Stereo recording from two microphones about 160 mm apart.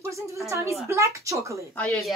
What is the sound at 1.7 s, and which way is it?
Speech, 5° left (ahead or behind).